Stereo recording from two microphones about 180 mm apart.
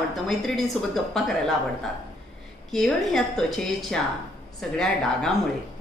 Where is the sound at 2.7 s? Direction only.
5° left (ahead or behind).